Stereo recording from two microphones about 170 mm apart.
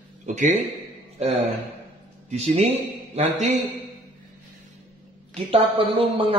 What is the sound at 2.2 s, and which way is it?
A man's voice, 40° right (ahead or behind).